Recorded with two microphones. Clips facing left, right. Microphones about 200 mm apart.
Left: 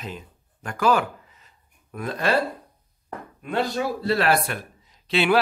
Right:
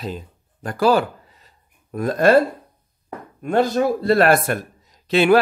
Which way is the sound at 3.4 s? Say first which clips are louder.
Right 7 dB; 45° right (ahead or behind).